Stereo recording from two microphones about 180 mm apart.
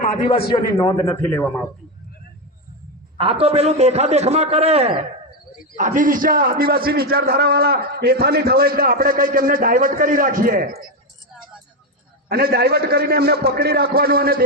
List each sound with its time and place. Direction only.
0.0 s a man's voice: 30° left (ahead or behind)
0.7 s a man's voice: 15° left (ahead or behind)
3.2 s a man's voice: 30° right (ahead or behind)
5.7 s a man's voice: 45° right (ahead or behind)
12.3 s a man's voice: 60° right (ahead or behind)